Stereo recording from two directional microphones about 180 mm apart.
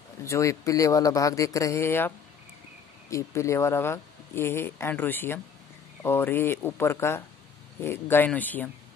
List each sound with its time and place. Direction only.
0.2 s speech: 15° left (ahead or behind)